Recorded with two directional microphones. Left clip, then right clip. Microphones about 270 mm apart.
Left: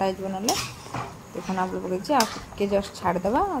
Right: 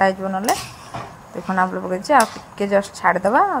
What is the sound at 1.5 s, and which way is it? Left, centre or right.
Speech, centre.